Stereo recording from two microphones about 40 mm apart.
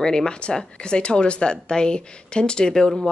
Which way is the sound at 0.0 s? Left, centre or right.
Centre.